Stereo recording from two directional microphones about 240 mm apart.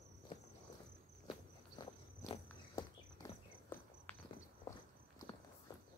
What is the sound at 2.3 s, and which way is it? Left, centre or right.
Walk, centre.